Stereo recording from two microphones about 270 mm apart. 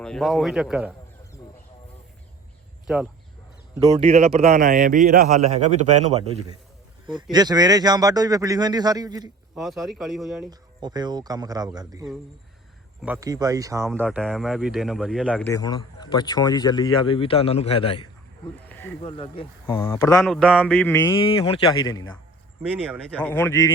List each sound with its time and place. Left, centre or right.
0.0 s speech: centre
2.8 s speech: centre
3.9 s a man's voice: right
9.6 s speech: centre
10.5 s a man's voice: centre
15.5 s speech: centre
18.7 s snake: centre
19.0 s speech: centre
23.1 s speech: centre